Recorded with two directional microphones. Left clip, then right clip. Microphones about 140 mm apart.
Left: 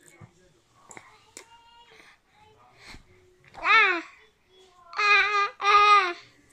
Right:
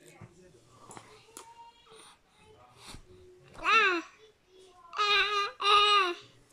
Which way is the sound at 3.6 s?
25° right (ahead or behind).